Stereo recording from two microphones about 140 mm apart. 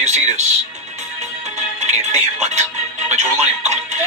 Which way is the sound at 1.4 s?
55° right (ahead or behind).